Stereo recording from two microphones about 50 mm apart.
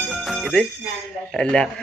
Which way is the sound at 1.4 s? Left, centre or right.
Centre.